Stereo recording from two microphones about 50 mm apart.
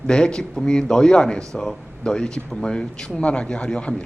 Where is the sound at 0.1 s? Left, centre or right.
Centre.